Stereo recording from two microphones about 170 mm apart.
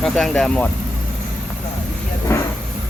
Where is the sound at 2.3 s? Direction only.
15° left (ahead or behind).